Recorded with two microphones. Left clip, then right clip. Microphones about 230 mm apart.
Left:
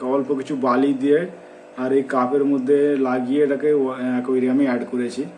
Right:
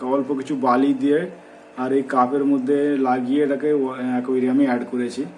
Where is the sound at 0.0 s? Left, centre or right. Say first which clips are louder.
Left 1 dB; centre.